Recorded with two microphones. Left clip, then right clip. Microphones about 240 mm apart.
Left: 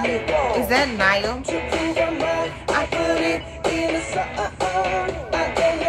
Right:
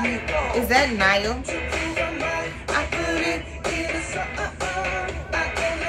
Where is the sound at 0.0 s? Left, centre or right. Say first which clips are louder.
Left 4 dB; left.